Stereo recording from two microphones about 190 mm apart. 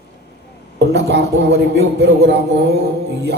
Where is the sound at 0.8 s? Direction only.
65° right (ahead or behind).